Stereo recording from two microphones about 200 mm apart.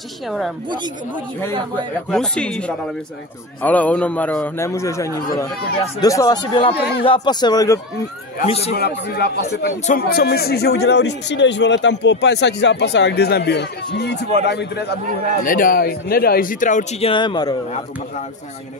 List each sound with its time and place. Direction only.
2.0 s a man's voice: 5° left (ahead or behind)
8.5 s speech: 30° left (ahead or behind)
8.7 s speech: 55° left (ahead or behind)
9.7 s speech: 45° left (ahead or behind)
15.4 s speech: 45° left (ahead or behind)
17.1 s speech: 20° left (ahead or behind)